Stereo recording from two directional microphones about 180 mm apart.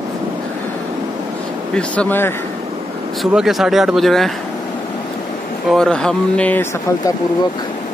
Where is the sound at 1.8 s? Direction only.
10° left (ahead or behind).